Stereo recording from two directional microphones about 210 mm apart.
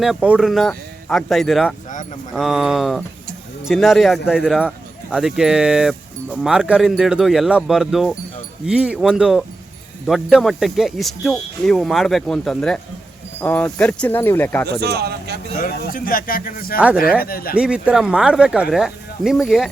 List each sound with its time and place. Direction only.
0.0 s speech: centre (ahead or behind)
14.8 s speech: 50° right (ahead or behind)
15.5 s speech: 40° left (ahead or behind)
17.6 s speech: 5° right (ahead or behind)